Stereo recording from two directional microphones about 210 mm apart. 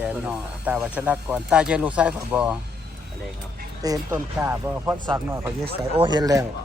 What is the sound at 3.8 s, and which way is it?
Speech, 15° right (ahead or behind).